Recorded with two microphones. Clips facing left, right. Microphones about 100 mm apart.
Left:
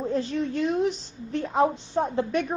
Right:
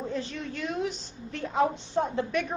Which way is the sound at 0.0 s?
35° left (ahead or behind).